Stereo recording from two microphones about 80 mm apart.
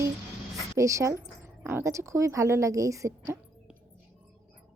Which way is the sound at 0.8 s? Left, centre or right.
Right.